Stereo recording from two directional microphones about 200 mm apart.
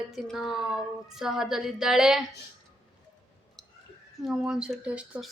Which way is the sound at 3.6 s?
5° left (ahead or behind).